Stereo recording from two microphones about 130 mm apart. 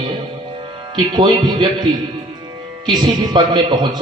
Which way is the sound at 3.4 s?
35° right (ahead or behind).